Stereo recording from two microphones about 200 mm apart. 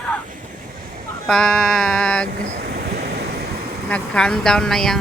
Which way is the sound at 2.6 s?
55° right (ahead or behind).